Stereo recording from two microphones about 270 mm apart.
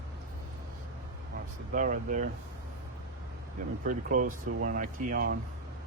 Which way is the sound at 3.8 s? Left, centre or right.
Right.